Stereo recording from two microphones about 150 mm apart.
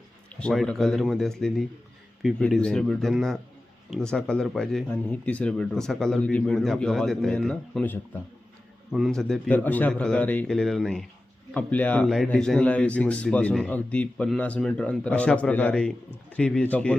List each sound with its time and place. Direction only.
0.3 s speech: 5° left (ahead or behind)
8.9 s speech: 5° right (ahead or behind)